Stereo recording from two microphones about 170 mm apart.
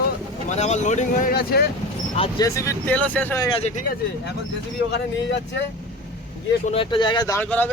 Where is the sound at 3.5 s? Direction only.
40° left (ahead or behind).